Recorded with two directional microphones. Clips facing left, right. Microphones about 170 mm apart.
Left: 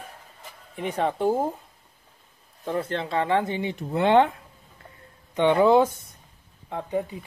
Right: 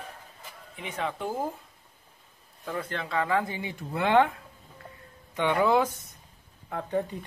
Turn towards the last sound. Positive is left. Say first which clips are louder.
# left 1 dB
turn(degrees=10)  # may be behind; listen again after turning